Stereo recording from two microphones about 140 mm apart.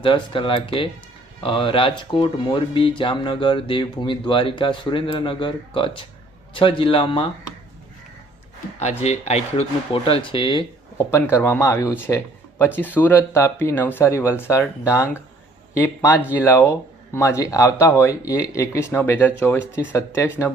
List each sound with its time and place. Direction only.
0.0 s speech: 40° left (ahead or behind)
9.0 s speech: 50° left (ahead or behind)
10.9 s speech: 20° left (ahead or behind)